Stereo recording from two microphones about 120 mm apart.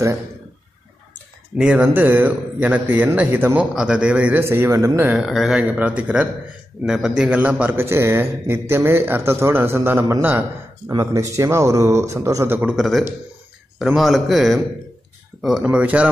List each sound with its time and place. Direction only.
1.6 s a man's voice: 5° right (ahead or behind)
3.7 s a man's voice: 5° right (ahead or behind)
4.4 s a man's voice: 20° right (ahead or behind)
5.1 s a man's voice: centre (ahead or behind); by 12.7 s 20° right (ahead or behind)
12.7 s a man's voice: centre (ahead or behind)